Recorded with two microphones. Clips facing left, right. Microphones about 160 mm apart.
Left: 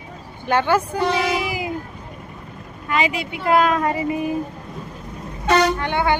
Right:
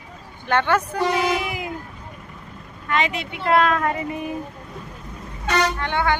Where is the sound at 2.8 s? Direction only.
5° left (ahead or behind).